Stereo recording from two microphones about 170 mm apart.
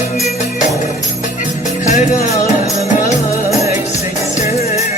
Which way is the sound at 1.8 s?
45° left (ahead or behind).